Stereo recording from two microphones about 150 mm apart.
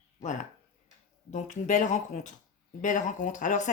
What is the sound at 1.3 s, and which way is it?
A woman's voice, 55° left (ahead or behind).